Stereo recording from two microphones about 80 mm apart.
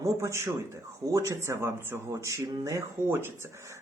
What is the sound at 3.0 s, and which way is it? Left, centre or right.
Speech, right.